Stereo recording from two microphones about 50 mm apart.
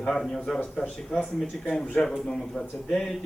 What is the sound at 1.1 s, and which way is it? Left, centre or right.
Speech, left.